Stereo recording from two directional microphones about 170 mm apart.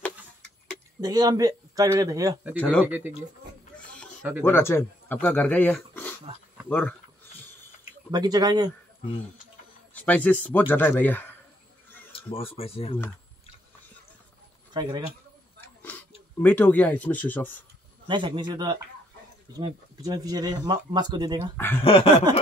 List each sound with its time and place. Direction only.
1.0 s speech: 20° right (ahead or behind)
2.5 s speech: 10° left (ahead or behind)
2.8 s speech: 10° right (ahead or behind)
3.7 s a sound: 5° left (ahead or behind)
4.2 s speech: 10° right (ahead or behind)
4.5 s speech: 15° left (ahead or behind)
8.1 s speech: 25° right (ahead or behind)
9.9 s speech: 10° left (ahead or behind)
12.1 s a sound: 35° left (ahead or behind)
12.5 s speech: 35° left (ahead or behind)
14.7 s speech: 25° right (ahead or behind)
16.4 s speech: 10° left (ahead or behind)
18.0 s speech: 30° right (ahead or behind)
21.8 s speech: 35° left (ahead or behind)